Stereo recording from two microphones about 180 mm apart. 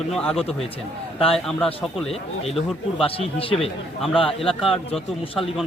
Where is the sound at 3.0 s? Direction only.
30° left (ahead or behind).